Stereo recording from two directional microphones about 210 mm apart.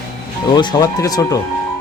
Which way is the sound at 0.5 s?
20° left (ahead or behind).